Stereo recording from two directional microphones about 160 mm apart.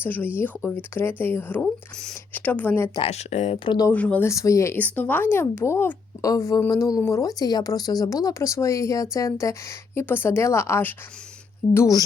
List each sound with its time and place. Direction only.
0.0 s speech: 10° left (ahead or behind)
2.9 s speech: 40° left (ahead or behind)
3.8 s speech: 10° left (ahead or behind)